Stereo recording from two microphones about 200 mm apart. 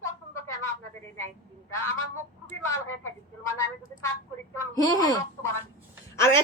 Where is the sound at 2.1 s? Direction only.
15° left (ahead or behind).